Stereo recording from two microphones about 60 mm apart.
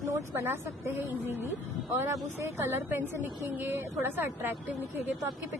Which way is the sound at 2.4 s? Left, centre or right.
Right.